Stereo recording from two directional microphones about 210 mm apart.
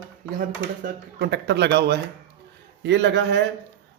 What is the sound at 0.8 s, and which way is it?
A man's voice, 50° right (ahead or behind).